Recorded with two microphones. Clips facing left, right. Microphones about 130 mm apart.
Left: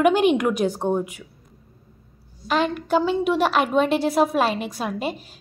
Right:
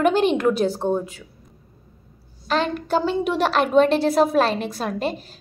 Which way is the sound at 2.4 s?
10° left (ahead or behind).